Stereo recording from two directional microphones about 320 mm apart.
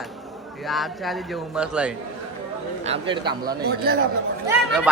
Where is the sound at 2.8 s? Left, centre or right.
Centre.